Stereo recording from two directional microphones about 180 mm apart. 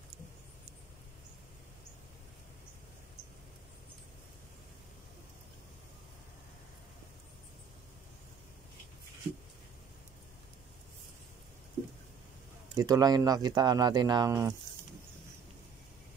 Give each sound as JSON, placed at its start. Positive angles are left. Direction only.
{"t": 12.7, "sound": "speech", "side_deg": -20}